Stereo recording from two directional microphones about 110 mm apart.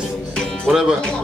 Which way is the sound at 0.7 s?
5° right (ahead or behind).